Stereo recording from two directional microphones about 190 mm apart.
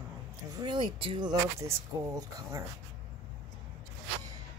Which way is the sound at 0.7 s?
25° right (ahead or behind).